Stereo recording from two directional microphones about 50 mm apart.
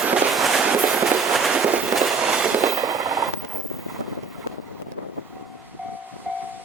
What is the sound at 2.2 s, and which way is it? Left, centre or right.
Train, centre.